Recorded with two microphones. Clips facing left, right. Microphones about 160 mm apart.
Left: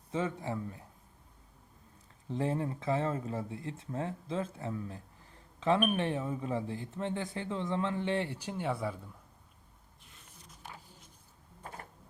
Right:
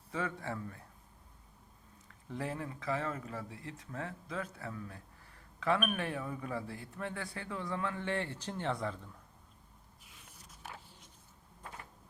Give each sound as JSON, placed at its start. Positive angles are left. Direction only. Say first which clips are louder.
{"t": 0.1, "sound": "speech", "louder": "left 4 dB", "side_deg": 20}
{"t": 2.3, "sound": "speech", "louder": "left 6 dB", "side_deg": 25}
{"t": 10.0, "sound": "a sound", "louder": "left 2 dB", "side_deg": -5}